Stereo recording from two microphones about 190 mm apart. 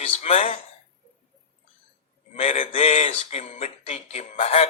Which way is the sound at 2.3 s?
35° left (ahead or behind).